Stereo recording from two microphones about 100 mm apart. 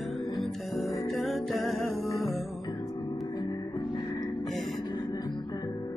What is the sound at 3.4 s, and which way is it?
Music, 50° left (ahead or behind).